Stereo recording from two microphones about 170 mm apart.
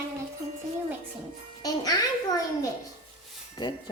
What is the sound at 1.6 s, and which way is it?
Speech, 20° left (ahead or behind).